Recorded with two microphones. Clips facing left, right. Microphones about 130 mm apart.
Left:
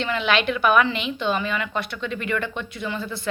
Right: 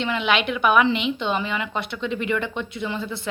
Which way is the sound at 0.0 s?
15° right (ahead or behind).